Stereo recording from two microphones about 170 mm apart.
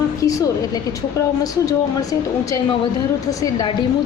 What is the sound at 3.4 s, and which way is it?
Speech, 20° left (ahead or behind).